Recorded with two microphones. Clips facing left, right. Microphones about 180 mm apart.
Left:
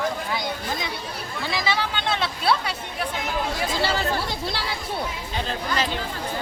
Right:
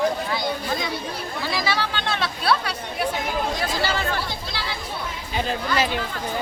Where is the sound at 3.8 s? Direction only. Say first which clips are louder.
Left 2 dB; 35° left (ahead or behind).